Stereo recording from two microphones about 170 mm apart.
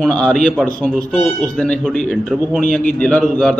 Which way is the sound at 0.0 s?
5° left (ahead or behind).